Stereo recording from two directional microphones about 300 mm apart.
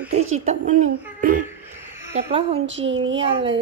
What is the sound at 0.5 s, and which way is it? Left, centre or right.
Speech, right.